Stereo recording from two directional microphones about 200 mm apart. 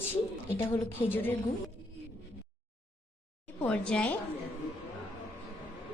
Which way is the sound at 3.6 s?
5° left (ahead or behind).